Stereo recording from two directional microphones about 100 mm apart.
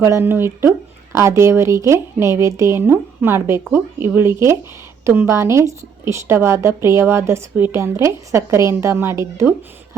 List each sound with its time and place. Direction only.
0.0 s a woman's voice: 25° right (ahead or behind)